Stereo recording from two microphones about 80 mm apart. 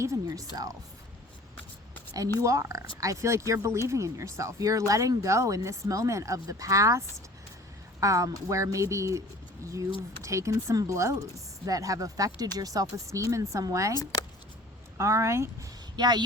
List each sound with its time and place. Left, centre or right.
0.0 s speech: right
0.5 s speech: right
2.4 s speech: right
8.0 s speech: right
10.2 s speech: right
13.9 s speech: left
14.9 s speech: right
16.0 s speech: right